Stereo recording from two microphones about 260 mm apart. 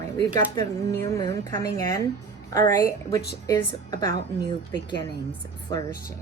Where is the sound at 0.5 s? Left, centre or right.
Centre.